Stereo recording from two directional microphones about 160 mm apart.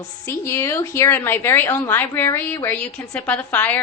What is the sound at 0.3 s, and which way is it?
A woman's voice, 20° left (ahead or behind).